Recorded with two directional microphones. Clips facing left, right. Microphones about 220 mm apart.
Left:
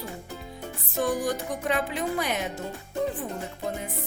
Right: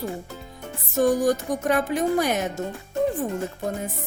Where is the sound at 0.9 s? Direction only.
45° right (ahead or behind).